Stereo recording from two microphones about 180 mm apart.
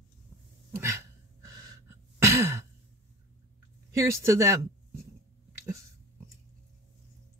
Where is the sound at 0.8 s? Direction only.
15° right (ahead or behind).